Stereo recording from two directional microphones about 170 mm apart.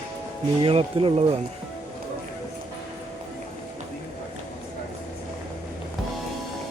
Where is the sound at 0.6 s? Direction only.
30° right (ahead or behind).